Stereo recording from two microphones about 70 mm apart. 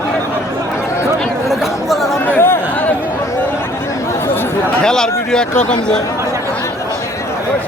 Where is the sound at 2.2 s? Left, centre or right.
Left.